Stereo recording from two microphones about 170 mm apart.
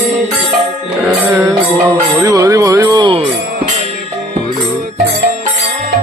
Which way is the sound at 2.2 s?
20° right (ahead or behind).